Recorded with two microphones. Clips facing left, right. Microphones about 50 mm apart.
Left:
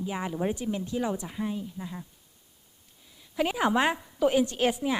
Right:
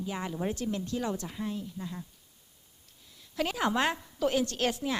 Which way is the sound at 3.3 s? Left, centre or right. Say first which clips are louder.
Left 4 dB; centre.